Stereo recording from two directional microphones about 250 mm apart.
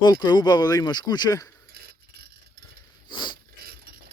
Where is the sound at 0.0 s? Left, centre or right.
Centre.